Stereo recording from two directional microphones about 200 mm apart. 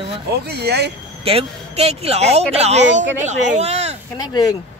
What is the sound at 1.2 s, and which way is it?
Speech, 30° right (ahead or behind).